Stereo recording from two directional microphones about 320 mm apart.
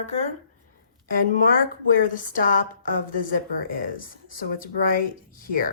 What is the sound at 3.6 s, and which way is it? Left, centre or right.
Speech, left.